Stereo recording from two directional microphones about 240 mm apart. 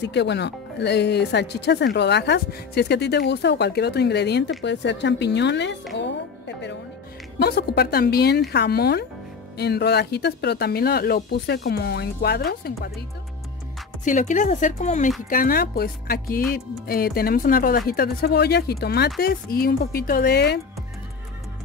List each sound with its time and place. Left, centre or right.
0.0 s speech: left
5.9 s music: left
7.3 s speech: left
14.0 s speech: left